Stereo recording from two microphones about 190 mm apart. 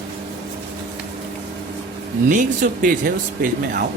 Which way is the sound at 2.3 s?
40° right (ahead or behind).